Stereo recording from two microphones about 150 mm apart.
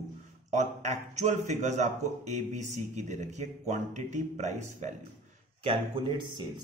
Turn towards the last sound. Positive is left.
turn(degrees=-30)  # may be behind; listen again after turning